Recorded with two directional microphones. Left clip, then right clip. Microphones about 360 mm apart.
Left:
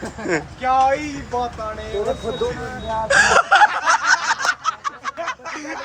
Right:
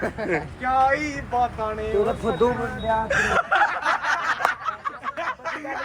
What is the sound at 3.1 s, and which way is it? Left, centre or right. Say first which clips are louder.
Chuckle: left 10 dB; centre.